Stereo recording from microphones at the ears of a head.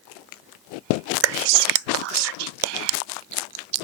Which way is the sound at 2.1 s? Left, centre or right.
Right.